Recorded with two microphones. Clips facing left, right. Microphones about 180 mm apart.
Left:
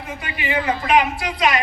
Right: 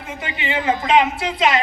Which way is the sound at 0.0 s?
25° right (ahead or behind).